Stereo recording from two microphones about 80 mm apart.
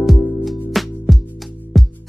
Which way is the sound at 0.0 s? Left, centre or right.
Centre.